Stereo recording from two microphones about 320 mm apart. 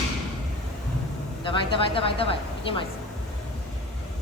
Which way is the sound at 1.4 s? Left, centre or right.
Centre.